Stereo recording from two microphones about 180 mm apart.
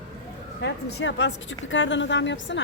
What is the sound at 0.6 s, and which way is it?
A woman's voice, 70° left (ahead or behind).